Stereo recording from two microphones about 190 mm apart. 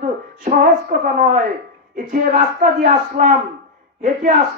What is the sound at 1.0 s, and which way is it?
Speech, 45° right (ahead or behind).